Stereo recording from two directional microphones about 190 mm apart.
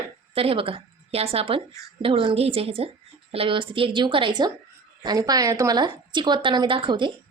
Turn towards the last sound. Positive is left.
turn(degrees=-25)  # may be behind; listen again after turning